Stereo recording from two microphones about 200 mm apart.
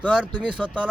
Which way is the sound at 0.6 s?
5° left (ahead or behind).